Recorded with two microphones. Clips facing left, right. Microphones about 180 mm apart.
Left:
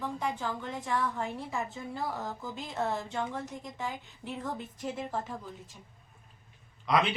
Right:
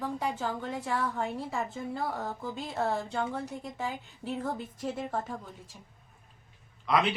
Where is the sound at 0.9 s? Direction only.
30° right (ahead or behind).